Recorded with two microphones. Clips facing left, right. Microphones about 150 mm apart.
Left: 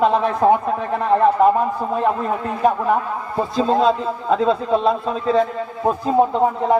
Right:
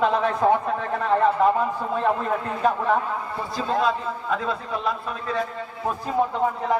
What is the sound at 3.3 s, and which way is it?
A man's voice, 25° left (ahead or behind).